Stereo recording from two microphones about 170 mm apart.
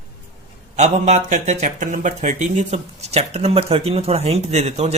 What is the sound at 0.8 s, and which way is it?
Speech, 45° right (ahead or behind).